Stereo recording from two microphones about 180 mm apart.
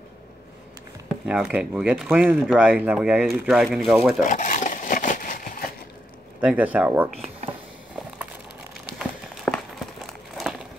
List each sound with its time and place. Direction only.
1.2 s speech: 5° right (ahead or behind)
4.2 s a sound: 45° left (ahead or behind)
6.4 s speech: 10° right (ahead or behind)
8.9 s run: centre (ahead or behind)
10.3 s crumpling: centre (ahead or behind)